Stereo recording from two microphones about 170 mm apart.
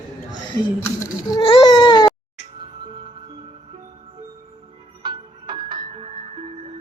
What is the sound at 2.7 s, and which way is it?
Music, 30° right (ahead or behind).